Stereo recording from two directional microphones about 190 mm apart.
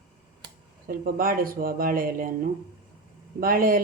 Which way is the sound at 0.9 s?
50° right (ahead or behind).